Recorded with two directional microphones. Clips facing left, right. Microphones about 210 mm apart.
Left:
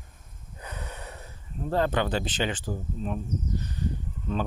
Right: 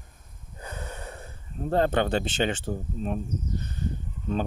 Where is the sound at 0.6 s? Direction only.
30° right (ahead or behind).